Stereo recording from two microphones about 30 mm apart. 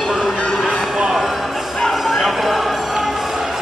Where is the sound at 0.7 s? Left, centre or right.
Right.